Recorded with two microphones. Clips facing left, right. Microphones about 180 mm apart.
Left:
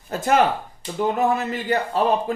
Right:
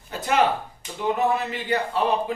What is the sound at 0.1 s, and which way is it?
A man's voice, 45° left (ahead or behind).